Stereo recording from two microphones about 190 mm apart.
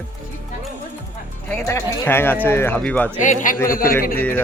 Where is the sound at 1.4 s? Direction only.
10° left (ahead or behind).